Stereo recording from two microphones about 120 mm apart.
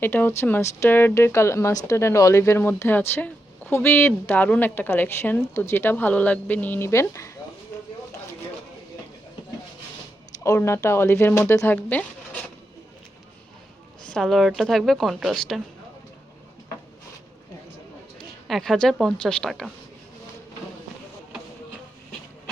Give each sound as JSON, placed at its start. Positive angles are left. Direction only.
{"t": 0.0, "sound": "speech", "side_deg": 15}
{"t": 10.4, "sound": "speech", "side_deg": 25}
{"t": 14.1, "sound": "a woman's voice", "side_deg": 0}
{"t": 18.4, "sound": "a woman's voice", "side_deg": 0}